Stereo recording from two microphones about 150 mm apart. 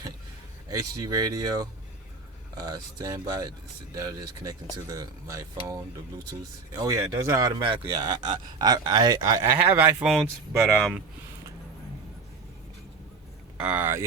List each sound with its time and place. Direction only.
0.7 s speech: 25° right (ahead or behind)
7.6 s speech: 35° right (ahead or behind)
9.6 s speech: 15° right (ahead or behind)
10.1 s speech: 5° right (ahead or behind)
13.6 s speech: 10° right (ahead or behind)